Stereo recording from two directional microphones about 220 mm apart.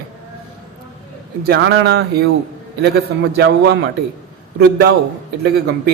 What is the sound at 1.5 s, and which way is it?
Speech, 50° right (ahead or behind).